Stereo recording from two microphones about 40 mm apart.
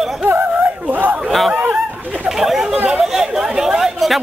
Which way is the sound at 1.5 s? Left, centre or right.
Right.